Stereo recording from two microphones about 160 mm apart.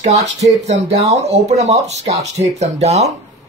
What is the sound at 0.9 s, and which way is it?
Speech, 20° right (ahead or behind).